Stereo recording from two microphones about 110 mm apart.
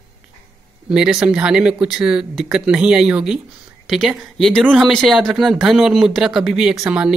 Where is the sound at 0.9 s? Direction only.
5° right (ahead or behind).